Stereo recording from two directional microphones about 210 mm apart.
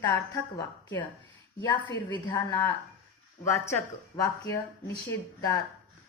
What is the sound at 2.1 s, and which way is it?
A woman's voice, 20° left (ahead or behind).